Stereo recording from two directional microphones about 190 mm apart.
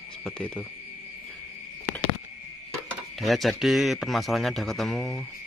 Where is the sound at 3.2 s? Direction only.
Centre (ahead or behind).